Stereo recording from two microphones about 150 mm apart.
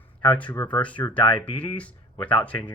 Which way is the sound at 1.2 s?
35° left (ahead or behind).